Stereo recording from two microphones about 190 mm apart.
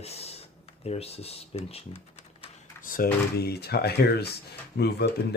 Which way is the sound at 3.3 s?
55° left (ahead or behind).